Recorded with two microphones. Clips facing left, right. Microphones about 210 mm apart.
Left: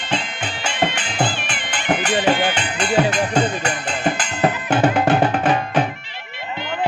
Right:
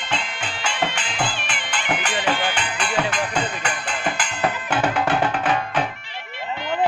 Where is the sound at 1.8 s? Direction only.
40° left (ahead or behind).